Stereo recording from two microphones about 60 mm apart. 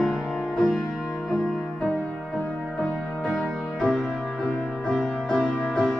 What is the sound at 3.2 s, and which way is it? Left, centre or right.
Music, centre.